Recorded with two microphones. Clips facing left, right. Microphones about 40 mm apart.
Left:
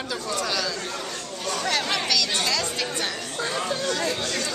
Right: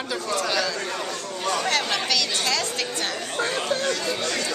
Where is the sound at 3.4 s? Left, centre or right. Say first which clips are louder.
Right 2 dB; right.